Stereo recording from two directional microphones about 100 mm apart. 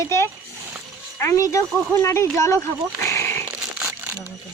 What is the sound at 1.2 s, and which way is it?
Speech, 35° left (ahead or behind).